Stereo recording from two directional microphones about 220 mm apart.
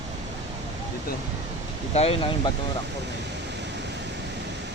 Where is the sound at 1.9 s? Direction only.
25° left (ahead or behind).